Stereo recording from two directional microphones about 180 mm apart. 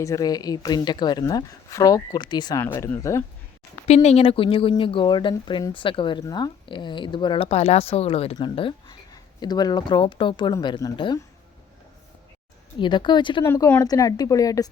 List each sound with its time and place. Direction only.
0.0 s speech: 20° left (ahead or behind)
2.6 s speech: 10° left (ahead or behind)
3.8 s speech: 35° left (ahead or behind)
12.8 s speech: 25° left (ahead or behind)
13.4 s speech: 15° left (ahead or behind)